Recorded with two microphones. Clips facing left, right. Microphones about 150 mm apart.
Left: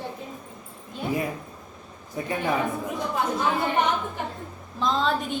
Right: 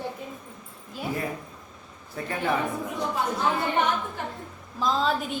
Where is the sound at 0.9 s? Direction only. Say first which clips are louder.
Left 2 dB; 5° right (ahead or behind).